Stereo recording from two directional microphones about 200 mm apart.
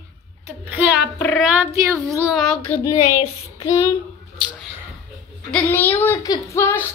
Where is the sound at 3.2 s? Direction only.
35° left (ahead or behind).